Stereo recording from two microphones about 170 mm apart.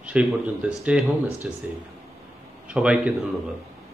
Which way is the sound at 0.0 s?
5° right (ahead or behind).